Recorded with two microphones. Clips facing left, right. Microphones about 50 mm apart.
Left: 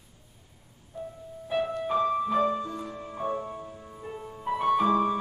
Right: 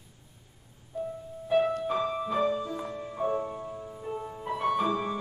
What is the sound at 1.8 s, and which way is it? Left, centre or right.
Music, centre.